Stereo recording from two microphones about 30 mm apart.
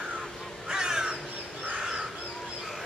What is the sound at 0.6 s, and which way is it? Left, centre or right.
Crow, right.